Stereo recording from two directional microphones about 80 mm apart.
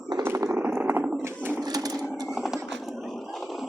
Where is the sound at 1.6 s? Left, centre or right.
Right.